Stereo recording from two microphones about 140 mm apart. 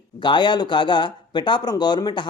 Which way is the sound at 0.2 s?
35° left (ahead or behind).